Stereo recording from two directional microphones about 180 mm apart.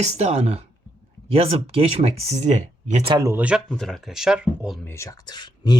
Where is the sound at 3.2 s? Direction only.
20° right (ahead or behind).